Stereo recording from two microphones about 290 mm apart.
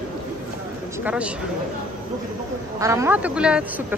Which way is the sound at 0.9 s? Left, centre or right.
Centre.